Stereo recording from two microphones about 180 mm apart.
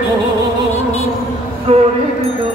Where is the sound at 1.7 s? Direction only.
35° right (ahead or behind).